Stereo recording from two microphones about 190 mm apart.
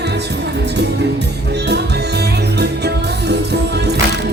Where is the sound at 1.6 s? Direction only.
60° right (ahead or behind).